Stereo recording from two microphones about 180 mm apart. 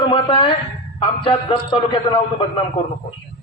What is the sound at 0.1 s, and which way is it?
A man's voice, 30° left (ahead or behind).